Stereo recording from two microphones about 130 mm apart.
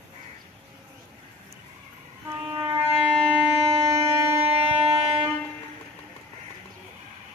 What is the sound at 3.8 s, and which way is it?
Music, 20° right (ahead or behind).